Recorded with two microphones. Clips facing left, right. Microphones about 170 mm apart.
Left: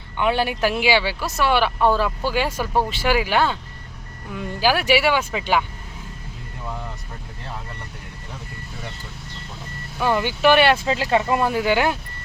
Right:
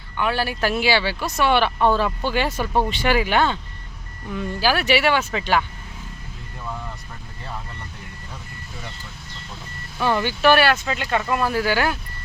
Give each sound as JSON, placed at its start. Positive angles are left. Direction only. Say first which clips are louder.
{"t": 0.2, "sound": "speech", "louder": "left 2 dB", "side_deg": 20}
{"t": 10.0, "sound": "speech", "louder": "left 1 dB", "side_deg": 10}